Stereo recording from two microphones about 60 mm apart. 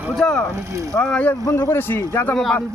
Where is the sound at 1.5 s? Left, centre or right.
Left.